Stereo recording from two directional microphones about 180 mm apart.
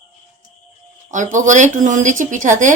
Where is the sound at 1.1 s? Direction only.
45° right (ahead or behind).